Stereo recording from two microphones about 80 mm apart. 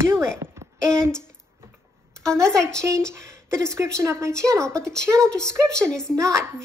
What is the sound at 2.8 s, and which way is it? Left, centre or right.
Speech, right.